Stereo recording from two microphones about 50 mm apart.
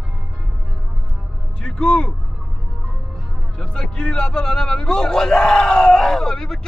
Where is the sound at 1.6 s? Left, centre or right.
Centre.